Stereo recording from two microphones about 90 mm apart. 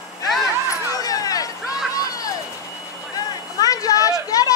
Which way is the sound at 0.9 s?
40° left (ahead or behind).